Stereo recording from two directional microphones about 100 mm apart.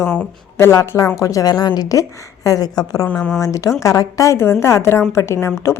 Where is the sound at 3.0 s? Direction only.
10° left (ahead or behind).